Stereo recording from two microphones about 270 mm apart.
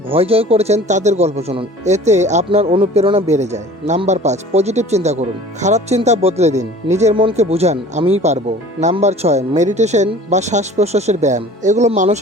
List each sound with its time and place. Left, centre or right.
0.1 s speech: right